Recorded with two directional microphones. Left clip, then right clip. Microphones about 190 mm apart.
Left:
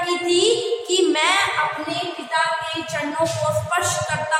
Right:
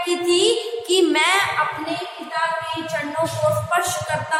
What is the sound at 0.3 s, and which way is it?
Music, 35° right (ahead or behind).